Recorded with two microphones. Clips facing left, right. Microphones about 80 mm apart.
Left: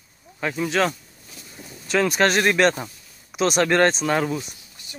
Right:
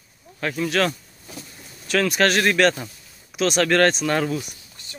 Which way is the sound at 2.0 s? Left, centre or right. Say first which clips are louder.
Even; left.